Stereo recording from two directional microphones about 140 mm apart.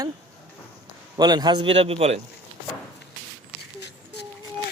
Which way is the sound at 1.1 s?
30° right (ahead or behind).